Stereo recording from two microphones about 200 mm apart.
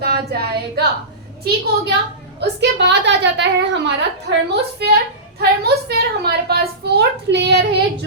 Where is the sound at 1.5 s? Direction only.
55° right (ahead or behind).